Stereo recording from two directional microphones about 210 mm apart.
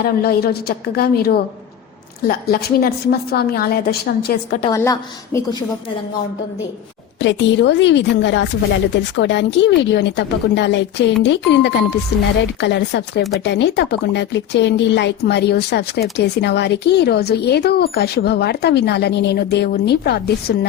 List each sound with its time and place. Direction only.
0.0 s speech: 45° left (ahead or behind)
4.7 s a woman's voice: 15° left (ahead or behind)
7.2 s speech: 60° left (ahead or behind)